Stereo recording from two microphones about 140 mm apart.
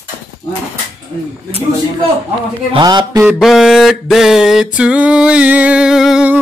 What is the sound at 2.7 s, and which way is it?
Speech, 30° right (ahead or behind).